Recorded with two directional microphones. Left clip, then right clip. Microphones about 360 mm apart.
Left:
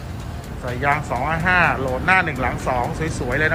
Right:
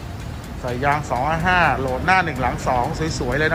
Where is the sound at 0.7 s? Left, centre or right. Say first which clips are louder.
Even; centre.